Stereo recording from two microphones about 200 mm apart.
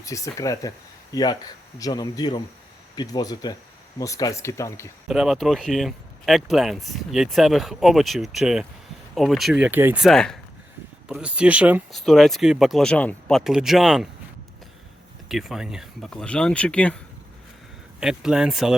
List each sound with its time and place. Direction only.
0.0 s speech: 15° left (ahead or behind)
5.0 s speech: centre (ahead or behind)
15.3 s speech: centre (ahead or behind)
18.0 s speech: 5° right (ahead or behind)